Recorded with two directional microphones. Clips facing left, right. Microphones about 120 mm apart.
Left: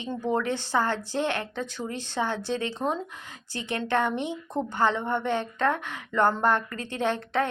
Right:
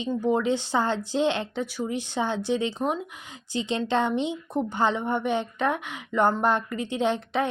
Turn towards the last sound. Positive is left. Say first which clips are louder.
# right 1 dB
turn(degrees=-15)  # may be behind; listen again after turning